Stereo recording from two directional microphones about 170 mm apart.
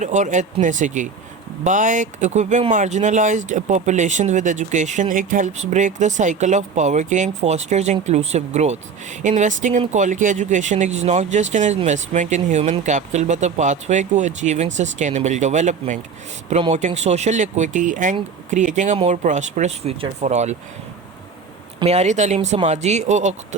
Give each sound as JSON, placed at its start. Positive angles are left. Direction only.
{"t": 0.0, "sound": "speech", "side_deg": -45}
{"t": 21.8, "sound": "speech", "side_deg": -35}